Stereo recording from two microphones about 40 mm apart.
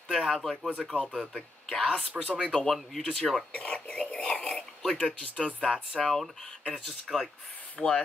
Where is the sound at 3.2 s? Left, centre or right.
Centre.